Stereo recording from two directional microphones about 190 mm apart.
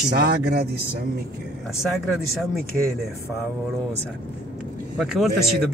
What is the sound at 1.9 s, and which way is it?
Speech, centre (ahead or behind).